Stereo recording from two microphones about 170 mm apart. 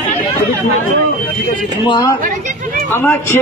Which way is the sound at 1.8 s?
25° left (ahead or behind).